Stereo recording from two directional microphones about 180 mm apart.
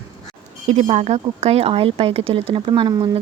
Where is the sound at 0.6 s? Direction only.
40° right (ahead or behind); by 3.2 s 25° right (ahead or behind).